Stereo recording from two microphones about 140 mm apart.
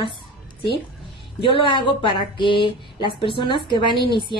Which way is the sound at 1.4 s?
35° left (ahead or behind).